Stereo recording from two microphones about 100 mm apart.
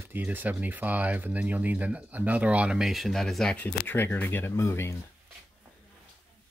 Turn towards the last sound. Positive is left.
turn(degrees=25)  # may be behind; listen again after turning